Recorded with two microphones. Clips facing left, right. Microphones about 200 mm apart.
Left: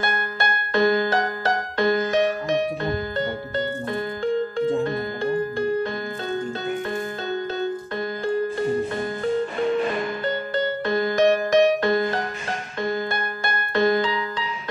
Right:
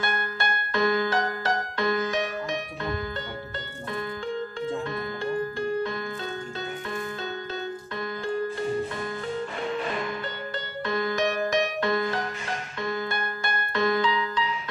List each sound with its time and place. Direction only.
0.0 s music: 35° left (ahead or behind)
4.6 s music: 35° left (ahead or behind)
10.9 s music: 35° left (ahead or behind)